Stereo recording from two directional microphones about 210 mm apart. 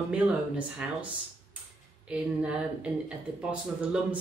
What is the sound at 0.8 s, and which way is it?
Speech, 5° right (ahead or behind).